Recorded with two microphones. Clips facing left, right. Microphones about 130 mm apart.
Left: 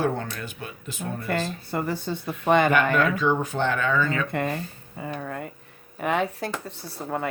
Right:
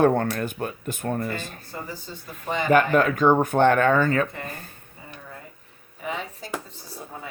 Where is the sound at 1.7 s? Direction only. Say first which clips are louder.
Left 9 dB; 65° left (ahead or behind).